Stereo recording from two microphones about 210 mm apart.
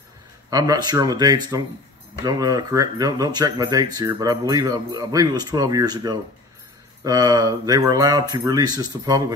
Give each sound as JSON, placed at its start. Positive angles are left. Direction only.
{"t": 0.5, "sound": "speech", "side_deg": -15}